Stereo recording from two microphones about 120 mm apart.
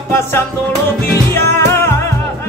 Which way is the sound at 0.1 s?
20° left (ahead or behind).